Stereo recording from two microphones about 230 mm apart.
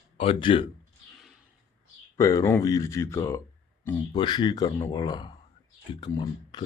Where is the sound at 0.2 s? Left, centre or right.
Left.